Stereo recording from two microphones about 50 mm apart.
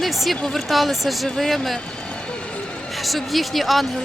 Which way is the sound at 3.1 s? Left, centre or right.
Centre.